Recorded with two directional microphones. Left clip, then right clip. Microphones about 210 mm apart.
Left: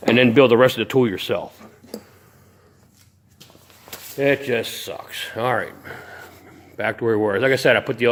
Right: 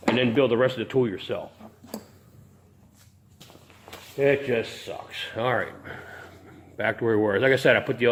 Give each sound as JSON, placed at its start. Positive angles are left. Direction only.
{"t": 0.1, "sound": "speech", "side_deg": 55}
{"t": 3.8, "sound": "speech", "side_deg": 50}